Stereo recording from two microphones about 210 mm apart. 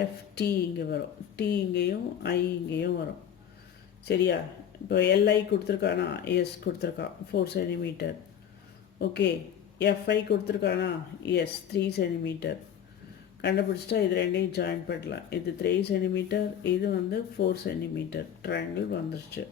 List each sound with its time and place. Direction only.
0.3 s speech: 50° left (ahead or behind)
4.1 s speech: 55° left (ahead or behind)